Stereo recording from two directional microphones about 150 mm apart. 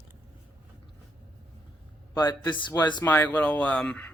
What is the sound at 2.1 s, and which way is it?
Speech, 30° left (ahead or behind).